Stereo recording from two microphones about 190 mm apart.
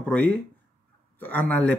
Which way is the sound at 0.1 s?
5° left (ahead or behind).